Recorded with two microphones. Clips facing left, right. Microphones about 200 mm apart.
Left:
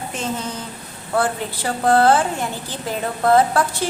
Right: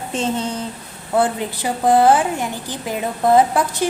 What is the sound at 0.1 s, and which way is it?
Speech, 30° right (ahead or behind).